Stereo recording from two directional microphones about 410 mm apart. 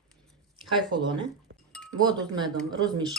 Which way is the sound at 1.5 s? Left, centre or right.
Right.